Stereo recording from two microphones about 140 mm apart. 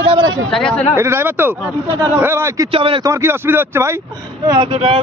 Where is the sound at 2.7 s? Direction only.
40° right (ahead or behind).